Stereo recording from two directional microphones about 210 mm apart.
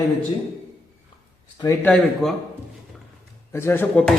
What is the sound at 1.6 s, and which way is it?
Speech, 15° left (ahead or behind).